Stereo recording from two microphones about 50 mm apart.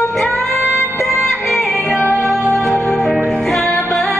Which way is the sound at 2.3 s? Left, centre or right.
Centre.